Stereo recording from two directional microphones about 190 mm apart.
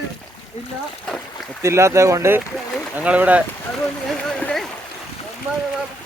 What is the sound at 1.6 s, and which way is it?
Speech, 15° right (ahead or behind).